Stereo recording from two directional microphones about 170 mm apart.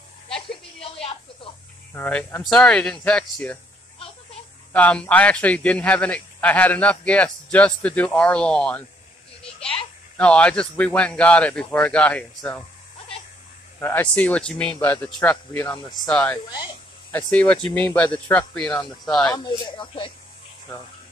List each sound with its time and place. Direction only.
0.9 s a sound: 35° left (ahead or behind)
2.0 s speech: 10° left (ahead or behind)
4.7 s a man's voice: 10° left (ahead or behind)
10.1 s a man's voice: 5° left (ahead or behind)
13.7 s a man's voice: 10° left (ahead or behind)
19.2 s speech: 25° left (ahead or behind)